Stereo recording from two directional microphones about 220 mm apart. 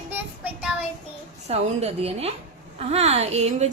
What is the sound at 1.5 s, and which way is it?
A woman's voice, 30° right (ahead or behind).